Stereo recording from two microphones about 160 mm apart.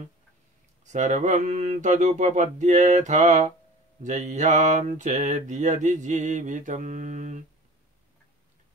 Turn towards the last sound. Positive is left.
turn(degrees=-50)  # may be behind; listen again after turning